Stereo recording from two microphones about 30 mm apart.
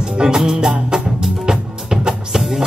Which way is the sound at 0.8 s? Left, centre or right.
Right.